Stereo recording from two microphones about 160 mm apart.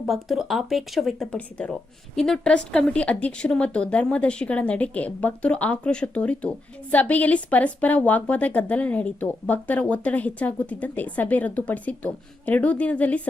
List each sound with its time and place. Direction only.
0.0 s a woman's voice: centre (ahead or behind)